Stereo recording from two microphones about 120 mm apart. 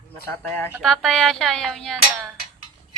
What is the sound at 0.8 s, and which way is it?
Speech, 5° left (ahead or behind).